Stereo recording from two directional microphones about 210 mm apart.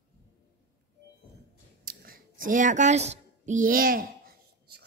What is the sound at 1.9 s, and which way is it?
Speech, 45° right (ahead or behind).